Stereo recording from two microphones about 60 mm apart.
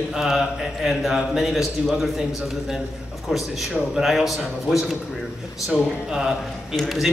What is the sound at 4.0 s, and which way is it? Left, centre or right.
A man's voice, centre.